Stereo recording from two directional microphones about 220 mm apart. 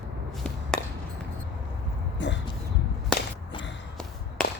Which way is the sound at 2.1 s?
55° left (ahead or behind).